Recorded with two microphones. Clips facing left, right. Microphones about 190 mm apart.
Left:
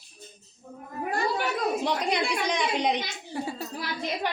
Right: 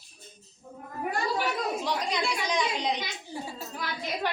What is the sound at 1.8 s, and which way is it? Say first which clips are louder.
A woman's voice: left 3 dB; 60° left (ahead or behind).